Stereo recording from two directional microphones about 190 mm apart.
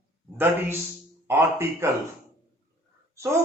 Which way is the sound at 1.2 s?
15° right (ahead or behind).